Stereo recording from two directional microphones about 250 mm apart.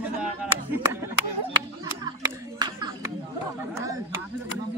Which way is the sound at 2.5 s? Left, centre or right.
Centre.